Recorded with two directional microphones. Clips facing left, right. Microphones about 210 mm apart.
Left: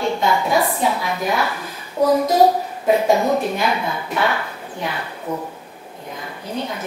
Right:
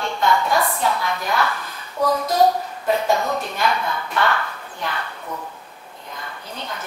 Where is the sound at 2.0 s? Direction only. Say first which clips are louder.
Left 4 dB; 25° left (ahead or behind).